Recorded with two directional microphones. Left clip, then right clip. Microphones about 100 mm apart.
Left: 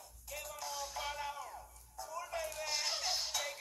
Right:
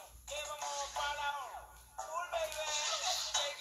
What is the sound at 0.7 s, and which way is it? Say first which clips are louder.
Music: right 2 dB; 35° left (ahead or behind).